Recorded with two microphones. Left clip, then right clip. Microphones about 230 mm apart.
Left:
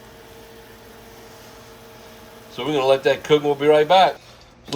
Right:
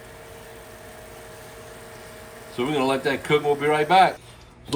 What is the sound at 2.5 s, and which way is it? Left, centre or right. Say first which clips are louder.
Speech: left 5 dB; centre.